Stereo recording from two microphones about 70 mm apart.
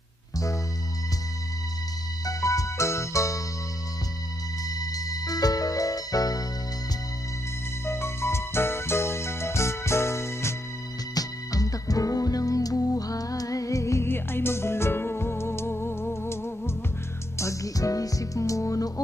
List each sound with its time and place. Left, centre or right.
2.2 s music: left
4.7 s music: left
7.9 s music: left
11.1 s music: left
14.1 s music: left
17.3 s music: left